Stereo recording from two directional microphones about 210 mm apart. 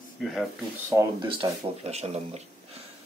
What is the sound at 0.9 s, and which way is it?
Speech, 20° right (ahead or behind).